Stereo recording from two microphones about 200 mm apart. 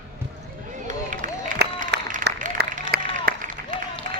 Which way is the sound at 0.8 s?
40° right (ahead or behind).